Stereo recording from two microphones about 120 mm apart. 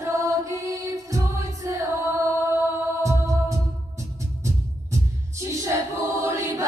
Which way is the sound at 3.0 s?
25° right (ahead or behind).